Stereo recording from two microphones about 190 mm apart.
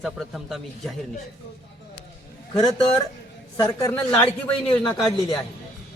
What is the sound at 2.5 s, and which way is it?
A man's voice, 25° left (ahead or behind).